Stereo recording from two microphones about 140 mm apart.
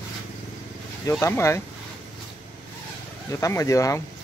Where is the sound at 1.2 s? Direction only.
20° left (ahead or behind).